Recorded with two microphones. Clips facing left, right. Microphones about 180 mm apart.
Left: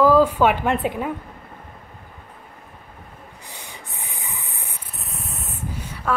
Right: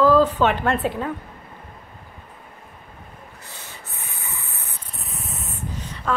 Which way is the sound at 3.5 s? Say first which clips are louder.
Left 2 dB; 15° left (ahead or behind).